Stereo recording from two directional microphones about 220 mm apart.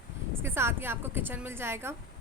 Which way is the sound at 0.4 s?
10° right (ahead or behind).